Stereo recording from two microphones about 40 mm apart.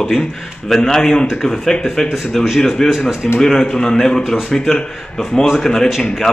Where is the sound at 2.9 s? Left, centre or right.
Centre.